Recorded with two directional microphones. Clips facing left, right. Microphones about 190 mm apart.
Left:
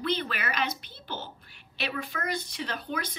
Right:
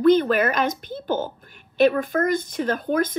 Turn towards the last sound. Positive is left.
turn(degrees=-45)  # may be behind; listen again after turning